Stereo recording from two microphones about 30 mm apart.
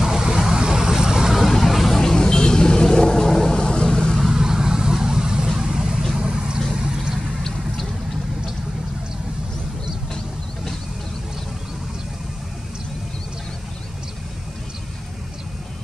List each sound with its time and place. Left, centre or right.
0.0 s vehicle: centre
1.6 s vehicle: centre
2.0 s vehicle: centre
4.2 s vehicle: centre